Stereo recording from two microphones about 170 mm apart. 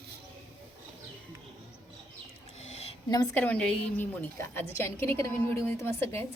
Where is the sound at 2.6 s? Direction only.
40° left (ahead or behind).